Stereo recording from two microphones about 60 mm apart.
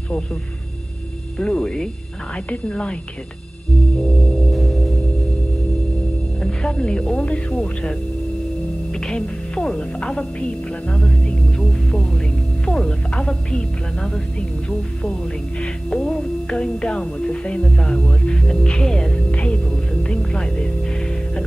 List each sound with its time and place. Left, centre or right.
1.4 s speech: centre
4.5 s sine wave: centre
6.4 s speech: centre
9.0 s speech: centre
15.6 s speech: centre